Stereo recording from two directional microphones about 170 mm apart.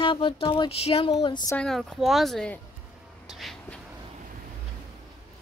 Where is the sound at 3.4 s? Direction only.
Centre (ahead or behind).